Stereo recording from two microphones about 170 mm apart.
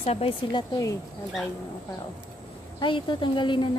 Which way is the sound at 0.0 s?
35° left (ahead or behind).